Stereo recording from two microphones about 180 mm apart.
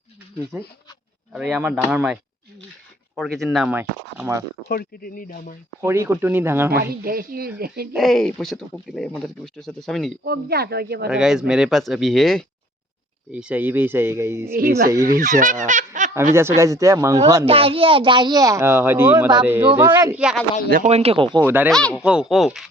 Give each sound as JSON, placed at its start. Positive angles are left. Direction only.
{"t": 0.5, "sound": "speech", "side_deg": -5}
{"t": 3.2, "sound": "speech", "side_deg": 0}
{"t": 4.7, "sound": "speech", "side_deg": 55}
{"t": 5.8, "sound": "speech", "side_deg": -15}
{"t": 7.0, "sound": "speech", "side_deg": -55}
{"t": 7.9, "sound": "speech", "side_deg": 0}
{"t": 10.2, "sound": "speech", "side_deg": -60}
{"t": 11.1, "sound": "speech", "side_deg": -5}
{"t": 14.5, "sound": "speech", "side_deg": -55}
{"t": 16.3, "sound": "speech", "side_deg": -15}
{"t": 17.4, "sound": "speech", "side_deg": -30}
{"t": 20.7, "sound": "speech", "side_deg": -45}
{"t": 21.4, "sound": "speech", "side_deg": -10}
{"t": 21.7, "sound": "speech", "side_deg": 5}